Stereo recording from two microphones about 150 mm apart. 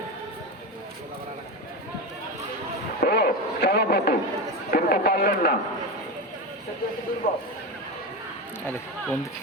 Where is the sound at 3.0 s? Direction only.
90° left.